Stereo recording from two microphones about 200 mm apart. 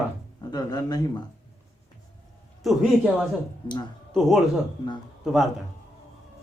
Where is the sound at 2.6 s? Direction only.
Centre (ahead or behind).